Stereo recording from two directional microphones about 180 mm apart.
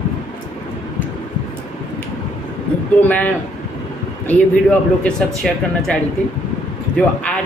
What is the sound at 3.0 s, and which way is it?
A woman's voice, 10° left (ahead or behind).